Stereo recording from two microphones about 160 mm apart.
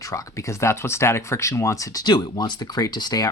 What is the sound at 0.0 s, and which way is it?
Speech, 20° left (ahead or behind).